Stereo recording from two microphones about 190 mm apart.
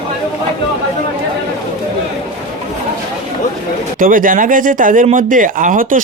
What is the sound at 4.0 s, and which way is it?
Speech, 45° right (ahead or behind).